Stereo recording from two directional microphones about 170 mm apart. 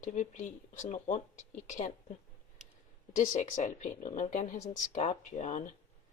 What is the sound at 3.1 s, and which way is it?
Speech, 50° left (ahead or behind).